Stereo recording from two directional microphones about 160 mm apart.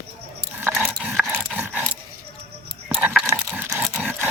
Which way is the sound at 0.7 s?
5° right (ahead or behind).